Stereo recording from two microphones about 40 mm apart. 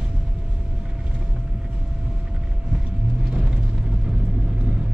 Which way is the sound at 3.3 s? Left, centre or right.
Centre.